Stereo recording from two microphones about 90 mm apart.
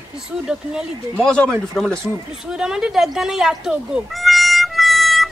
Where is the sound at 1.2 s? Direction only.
10° left (ahead or behind).